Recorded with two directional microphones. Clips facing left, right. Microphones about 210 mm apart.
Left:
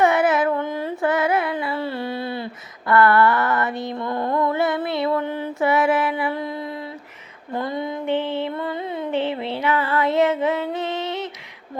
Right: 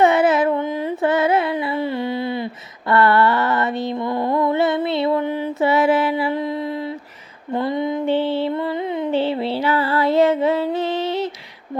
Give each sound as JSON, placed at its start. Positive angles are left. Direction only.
{"t": 0.0, "sound": "carnatic music", "side_deg": -25}
{"t": 5.5, "sound": "mantra", "side_deg": -25}
{"t": 7.5, "sound": "female singing", "side_deg": -20}
{"t": 8.0, "sound": "music", "side_deg": -30}
{"t": 9.1, "sound": "music", "side_deg": -30}